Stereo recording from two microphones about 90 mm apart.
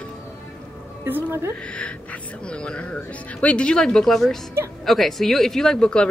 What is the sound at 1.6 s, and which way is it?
Speech, 10° left (ahead or behind).